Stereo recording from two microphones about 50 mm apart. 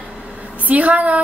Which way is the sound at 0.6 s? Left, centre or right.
Right.